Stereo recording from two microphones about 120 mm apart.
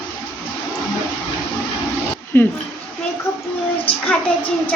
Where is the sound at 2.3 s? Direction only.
15° left (ahead or behind).